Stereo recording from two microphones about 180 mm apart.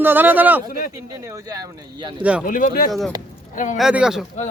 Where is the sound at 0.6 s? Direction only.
50° left (ahead or behind).